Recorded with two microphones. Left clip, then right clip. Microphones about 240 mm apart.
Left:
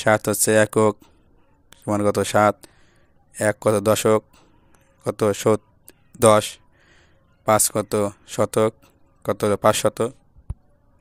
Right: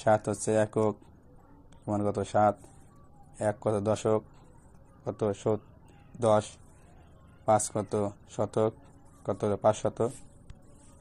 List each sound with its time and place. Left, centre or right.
0.0 s speech: left
7.4 s speech: left